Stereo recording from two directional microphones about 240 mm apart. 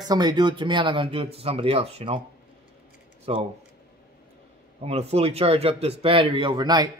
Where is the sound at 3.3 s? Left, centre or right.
Right.